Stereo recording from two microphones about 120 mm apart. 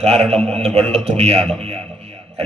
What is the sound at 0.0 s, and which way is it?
A man's voice, 60° right (ahead or behind).